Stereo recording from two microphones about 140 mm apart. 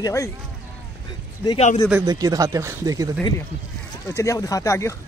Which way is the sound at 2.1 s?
25° right (ahead or behind).